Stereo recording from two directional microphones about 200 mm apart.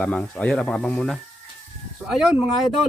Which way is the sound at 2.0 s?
5° right (ahead or behind).